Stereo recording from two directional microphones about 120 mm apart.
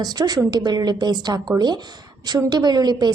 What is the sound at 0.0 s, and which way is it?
A woman's voice, 35° right (ahead or behind).